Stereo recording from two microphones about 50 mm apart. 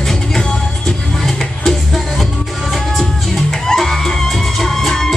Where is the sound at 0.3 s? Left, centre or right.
Centre.